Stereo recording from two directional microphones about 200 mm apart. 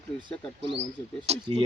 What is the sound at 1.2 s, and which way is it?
Speech, 30° right (ahead or behind).